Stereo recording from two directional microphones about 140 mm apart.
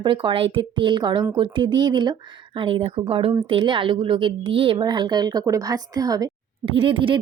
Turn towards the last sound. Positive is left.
turn(degrees=-40)  # may be behind; listen again after turning